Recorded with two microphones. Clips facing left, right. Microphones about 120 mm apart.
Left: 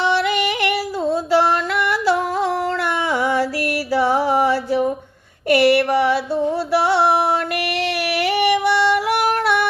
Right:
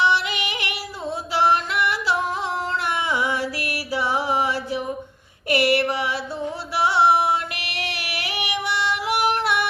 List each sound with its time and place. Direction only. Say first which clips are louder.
0.0 s yodeling: left 4 dB; 50° left (ahead or behind)
1.9 s music: left 5 dB; 50° left (ahead or behind)
3.1 s female singing: left 7 dB; 50° left (ahead or behind)
3.9 s music: left 6 dB; 45° left (ahead or behind)
5.5 s a sound: left 6 dB; 45° left (ahead or behind)
6.7 s music: left 2 dB; 45° left (ahead or behind)
8.2 s female singing: left 11 dB; 55° left (ahead or behind)